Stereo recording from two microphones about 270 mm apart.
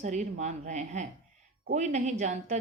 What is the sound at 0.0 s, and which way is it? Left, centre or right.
A woman's voice, right.